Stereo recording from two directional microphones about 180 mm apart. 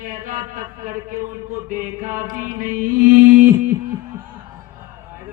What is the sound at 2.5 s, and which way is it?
Music, 50° right (ahead or behind).